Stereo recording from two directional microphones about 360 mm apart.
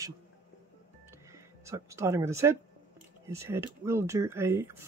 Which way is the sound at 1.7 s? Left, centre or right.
Centre.